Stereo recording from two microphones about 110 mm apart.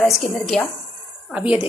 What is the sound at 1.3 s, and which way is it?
Speech, 10° right (ahead or behind).